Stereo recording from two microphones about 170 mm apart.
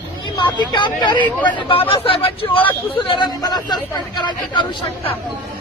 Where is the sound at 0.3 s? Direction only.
25° left (ahead or behind).